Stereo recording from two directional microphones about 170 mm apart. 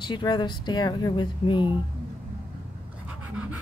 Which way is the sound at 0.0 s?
25° left (ahead or behind).